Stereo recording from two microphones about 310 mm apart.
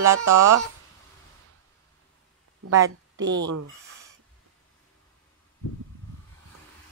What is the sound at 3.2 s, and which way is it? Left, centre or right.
Speech, right.